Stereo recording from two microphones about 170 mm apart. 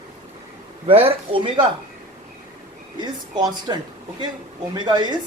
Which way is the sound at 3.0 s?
25° right (ahead or behind).